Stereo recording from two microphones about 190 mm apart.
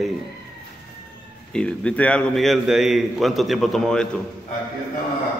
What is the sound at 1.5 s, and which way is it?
A man's voice, 5° left (ahead or behind).